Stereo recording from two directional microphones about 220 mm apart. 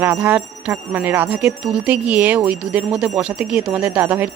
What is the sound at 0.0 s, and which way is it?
Speech, 5° right (ahead or behind).